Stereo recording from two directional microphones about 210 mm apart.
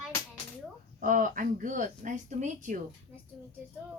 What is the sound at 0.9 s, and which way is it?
Speech, 40° right (ahead or behind).